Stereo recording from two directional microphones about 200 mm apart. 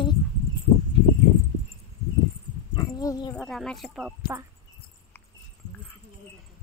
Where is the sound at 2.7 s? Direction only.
15° left (ahead or behind).